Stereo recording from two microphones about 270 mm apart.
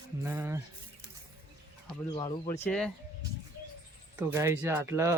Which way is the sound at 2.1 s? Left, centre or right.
Centre.